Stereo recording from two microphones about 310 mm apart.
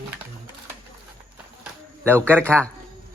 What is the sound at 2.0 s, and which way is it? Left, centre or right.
Speech, centre.